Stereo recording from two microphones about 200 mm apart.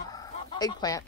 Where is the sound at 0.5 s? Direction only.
20° left (ahead or behind).